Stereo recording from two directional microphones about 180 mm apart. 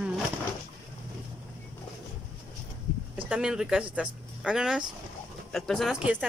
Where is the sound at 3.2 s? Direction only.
5° right (ahead or behind).